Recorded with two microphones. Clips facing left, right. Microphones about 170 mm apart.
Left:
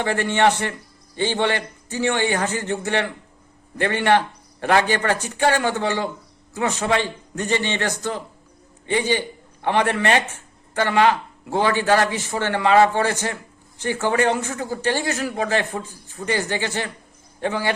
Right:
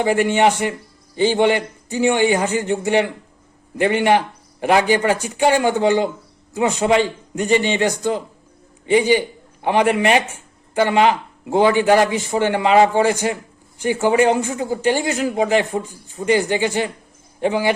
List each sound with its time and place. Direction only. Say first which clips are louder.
0.0 s a man's voice: right 3 dB; 10° right (ahead or behind)